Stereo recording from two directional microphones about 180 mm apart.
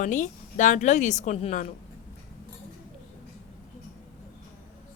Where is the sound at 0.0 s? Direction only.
45° left (ahead or behind).